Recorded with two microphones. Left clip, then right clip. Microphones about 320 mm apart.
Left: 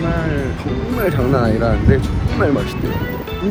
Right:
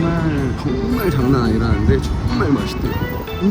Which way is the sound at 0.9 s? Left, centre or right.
Centre.